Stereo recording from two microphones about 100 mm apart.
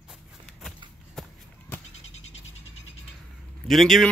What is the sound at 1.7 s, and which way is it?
Goat, 20° left (ahead or behind).